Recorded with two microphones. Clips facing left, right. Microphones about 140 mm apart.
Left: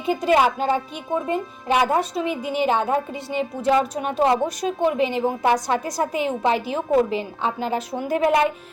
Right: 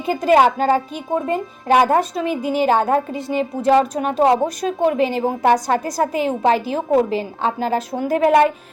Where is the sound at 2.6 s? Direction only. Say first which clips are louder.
Right 4 dB; 40° right (ahead or behind).